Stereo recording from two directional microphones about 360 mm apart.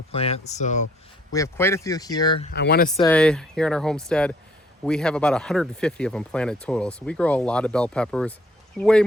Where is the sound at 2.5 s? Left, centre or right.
Left.